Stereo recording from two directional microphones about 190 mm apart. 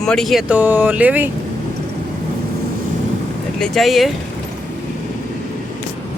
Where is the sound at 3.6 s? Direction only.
Centre (ahead or behind).